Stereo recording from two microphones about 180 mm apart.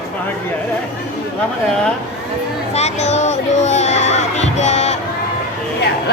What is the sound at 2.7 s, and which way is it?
Music, 40° left (ahead or behind).